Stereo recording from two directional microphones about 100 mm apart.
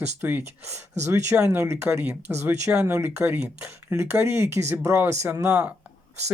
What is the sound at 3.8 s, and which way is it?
Speech, 25° right (ahead or behind).